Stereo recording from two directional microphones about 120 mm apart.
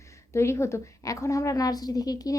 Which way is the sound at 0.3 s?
25° left (ahead or behind).